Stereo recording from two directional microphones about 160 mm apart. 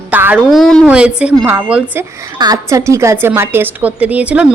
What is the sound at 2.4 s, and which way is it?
A woman's voice, 20° right (ahead or behind).